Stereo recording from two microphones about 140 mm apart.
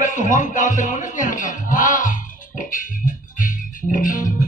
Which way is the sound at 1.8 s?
70° left (ahead or behind).